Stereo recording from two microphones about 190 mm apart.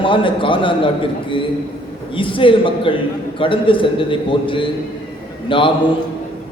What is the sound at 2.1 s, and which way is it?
A man's voice, 25° left (ahead or behind).